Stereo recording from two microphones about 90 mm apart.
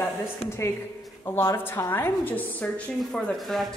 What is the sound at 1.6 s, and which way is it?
A woman's voice, 25° left (ahead or behind).